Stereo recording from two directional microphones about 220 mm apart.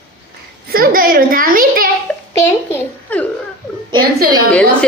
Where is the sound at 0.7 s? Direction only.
40° right (ahead or behind).